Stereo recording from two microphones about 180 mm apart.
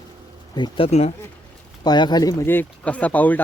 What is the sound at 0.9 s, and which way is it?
Speech, 35° left (ahead or behind).